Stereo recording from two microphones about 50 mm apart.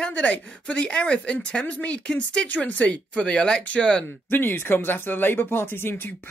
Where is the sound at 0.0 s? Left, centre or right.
Left.